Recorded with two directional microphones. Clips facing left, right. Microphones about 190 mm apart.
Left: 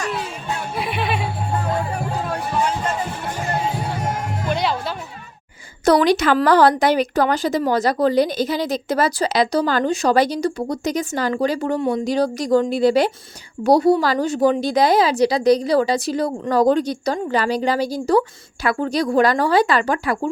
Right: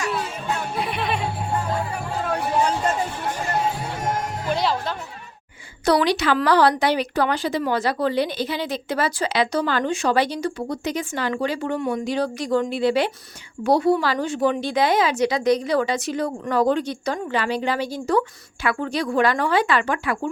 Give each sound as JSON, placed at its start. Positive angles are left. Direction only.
{"t": 0.8, "sound": "music", "side_deg": 5}
{"t": 4.4, "sound": "music", "side_deg": 0}
{"t": 5.8, "sound": "speech", "side_deg": 45}